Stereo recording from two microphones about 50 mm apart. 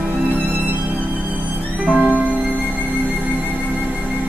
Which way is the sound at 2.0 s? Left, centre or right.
Right.